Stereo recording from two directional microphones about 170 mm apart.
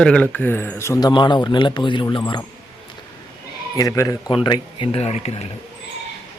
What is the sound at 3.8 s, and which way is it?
Speech, 20° left (ahead or behind).